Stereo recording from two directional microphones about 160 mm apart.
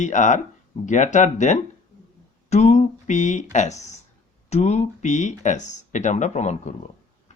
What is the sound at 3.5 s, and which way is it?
Speech, 45° left (ahead or behind).